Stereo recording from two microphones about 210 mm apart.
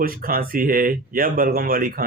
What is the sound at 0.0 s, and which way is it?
Speech, 45° right (ahead or behind).